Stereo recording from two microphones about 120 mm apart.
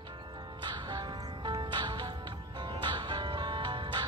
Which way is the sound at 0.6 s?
35° right (ahead or behind).